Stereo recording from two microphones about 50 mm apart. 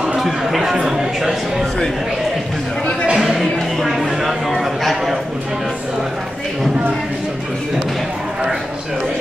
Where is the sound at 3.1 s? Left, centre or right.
Centre.